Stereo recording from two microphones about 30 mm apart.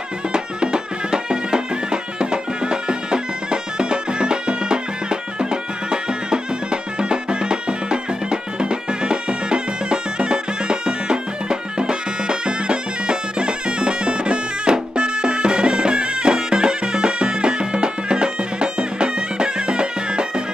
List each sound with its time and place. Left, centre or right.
0.3 s music: right